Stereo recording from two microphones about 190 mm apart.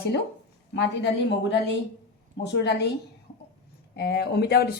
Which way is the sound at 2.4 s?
60° left (ahead or behind).